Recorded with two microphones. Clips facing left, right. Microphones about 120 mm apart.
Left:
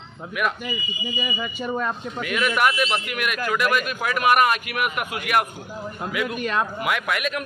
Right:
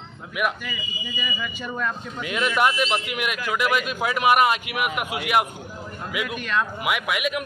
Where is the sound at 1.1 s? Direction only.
30° left (ahead or behind).